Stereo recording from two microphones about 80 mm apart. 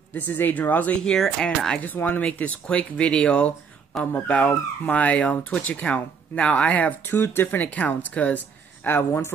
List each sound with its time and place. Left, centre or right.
0.3 s speech: left
1.0 s speech: centre
1.8 s speech: left
8.8 s speech: left